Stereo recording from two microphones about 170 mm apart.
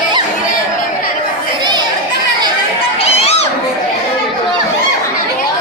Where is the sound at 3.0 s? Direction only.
40° left (ahead or behind).